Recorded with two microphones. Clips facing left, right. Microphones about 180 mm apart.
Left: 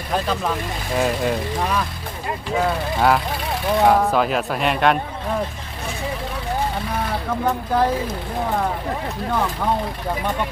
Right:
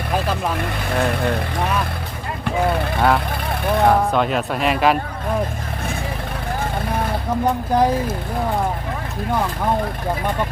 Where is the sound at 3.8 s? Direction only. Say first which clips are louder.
Even; centre (ahead or behind).